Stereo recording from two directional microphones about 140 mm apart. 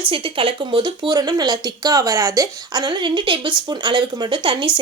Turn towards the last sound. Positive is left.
turn(degrees=-35)  # may be behind; listen again after turning